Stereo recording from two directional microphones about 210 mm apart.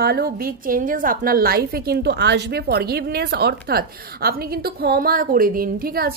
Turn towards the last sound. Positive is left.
turn(degrees=-45)  # may be behind; listen again after turning